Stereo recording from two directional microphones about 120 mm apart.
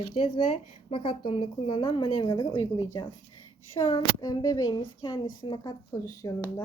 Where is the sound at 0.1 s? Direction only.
55° left (ahead or behind).